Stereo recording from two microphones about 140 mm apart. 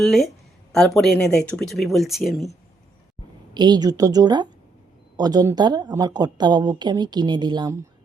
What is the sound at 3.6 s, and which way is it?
A woman's voice, 30° right (ahead or behind).